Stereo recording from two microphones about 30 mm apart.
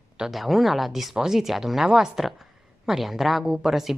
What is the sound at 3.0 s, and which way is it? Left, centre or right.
Speech, centre.